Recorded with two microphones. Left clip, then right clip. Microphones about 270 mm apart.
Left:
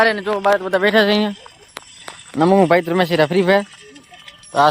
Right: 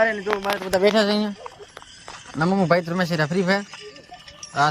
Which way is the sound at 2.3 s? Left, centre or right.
Left.